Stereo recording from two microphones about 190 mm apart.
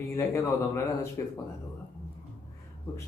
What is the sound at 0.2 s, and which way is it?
Speech, 15° left (ahead or behind).